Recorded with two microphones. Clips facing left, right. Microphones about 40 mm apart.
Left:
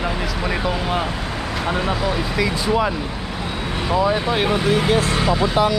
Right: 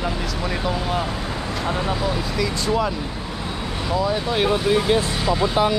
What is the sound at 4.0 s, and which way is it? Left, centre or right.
Speech, left.